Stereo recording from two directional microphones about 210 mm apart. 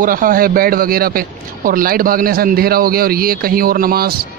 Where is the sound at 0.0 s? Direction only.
40° right (ahead or behind).